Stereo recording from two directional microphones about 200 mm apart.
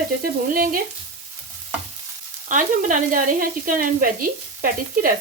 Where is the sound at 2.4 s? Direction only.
40° right (ahead or behind).